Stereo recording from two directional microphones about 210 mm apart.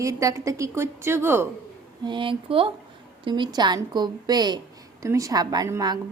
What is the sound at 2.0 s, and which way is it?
A woman's voice, 25° right (ahead or behind).